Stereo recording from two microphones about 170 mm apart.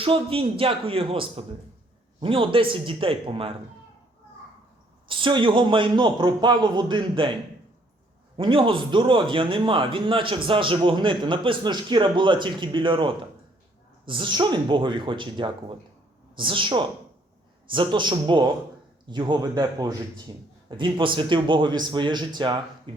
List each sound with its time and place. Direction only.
0.0 s a man's voice: 35° right (ahead or behind)
5.0 s a man's voice: 30° right (ahead or behind)
8.4 s a man's voice: 30° right (ahead or behind)
22.9 s a sound: 30° right (ahead or behind)